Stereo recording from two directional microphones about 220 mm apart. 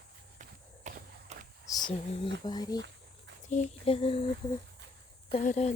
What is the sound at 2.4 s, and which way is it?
Speech, 20° left (ahead or behind).